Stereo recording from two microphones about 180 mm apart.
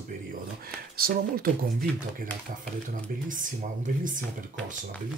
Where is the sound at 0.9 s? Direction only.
55° right (ahead or behind).